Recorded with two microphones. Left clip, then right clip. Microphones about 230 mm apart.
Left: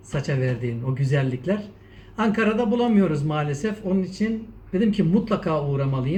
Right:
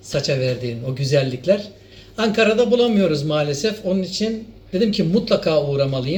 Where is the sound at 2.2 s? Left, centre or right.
Right.